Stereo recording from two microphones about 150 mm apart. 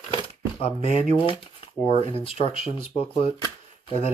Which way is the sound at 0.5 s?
40° left (ahead or behind).